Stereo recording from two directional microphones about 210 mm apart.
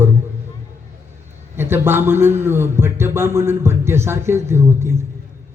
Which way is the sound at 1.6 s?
10° right (ahead or behind).